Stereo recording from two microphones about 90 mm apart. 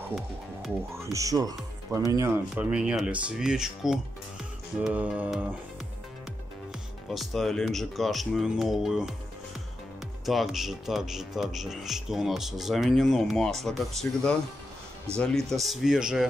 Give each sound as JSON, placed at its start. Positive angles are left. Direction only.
{"t": 1.1, "sound": "speech", "side_deg": -40}
{"t": 2.1, "sound": "speech", "side_deg": -30}
{"t": 2.5, "sound": "speech", "side_deg": -10}
{"t": 7.1, "sound": "speech", "side_deg": 0}
{"t": 10.2, "sound": "speech", "side_deg": 0}